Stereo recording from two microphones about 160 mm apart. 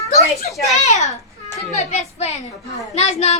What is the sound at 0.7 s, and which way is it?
A woman's voice, 45° left (ahead or behind).